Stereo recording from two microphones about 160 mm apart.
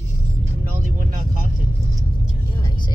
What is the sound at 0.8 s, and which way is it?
Vehicle, 55° right (ahead or behind).